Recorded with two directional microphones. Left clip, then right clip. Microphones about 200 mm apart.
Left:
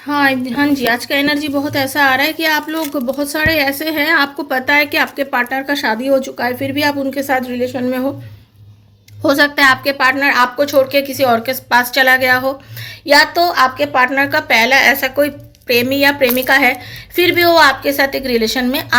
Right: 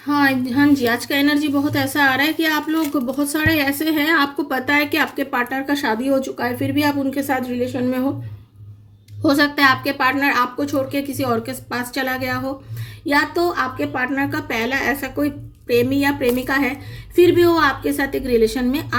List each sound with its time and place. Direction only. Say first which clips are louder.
0.0 s a woman's voice: left 3 dB; 15° right (ahead or behind)
9.2 s a woman's voice: left 4 dB; 15° right (ahead or behind)